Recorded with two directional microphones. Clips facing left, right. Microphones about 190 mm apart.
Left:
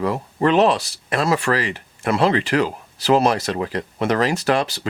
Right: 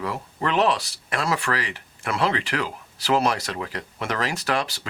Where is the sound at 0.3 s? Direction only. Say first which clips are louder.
Left 6 dB; 25° left (ahead or behind).